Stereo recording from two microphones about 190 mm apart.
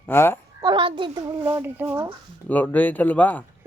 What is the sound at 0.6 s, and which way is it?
A child's voice, 25° right (ahead or behind).